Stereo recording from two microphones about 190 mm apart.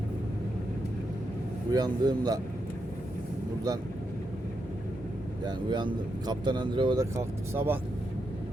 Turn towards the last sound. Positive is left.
turn(degrees=-10)  # may be behind; listen again after turning